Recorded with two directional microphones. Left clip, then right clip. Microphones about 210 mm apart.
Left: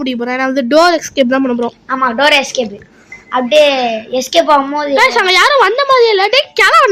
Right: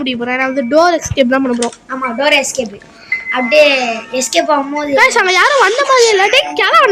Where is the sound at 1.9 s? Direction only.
15° left (ahead or behind).